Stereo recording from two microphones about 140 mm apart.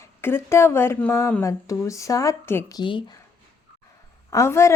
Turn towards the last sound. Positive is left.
turn(degrees=20)  # may be behind; listen again after turning